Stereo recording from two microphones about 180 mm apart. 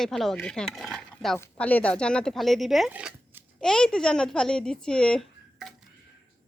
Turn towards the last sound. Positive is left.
turn(degrees=5)  # may be behind; listen again after turning